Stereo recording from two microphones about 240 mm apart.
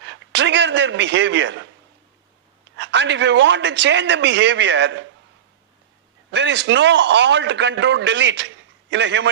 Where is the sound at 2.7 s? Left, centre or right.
Right.